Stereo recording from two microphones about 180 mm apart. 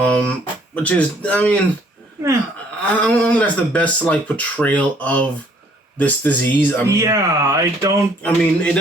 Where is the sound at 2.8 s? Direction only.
10° left (ahead or behind).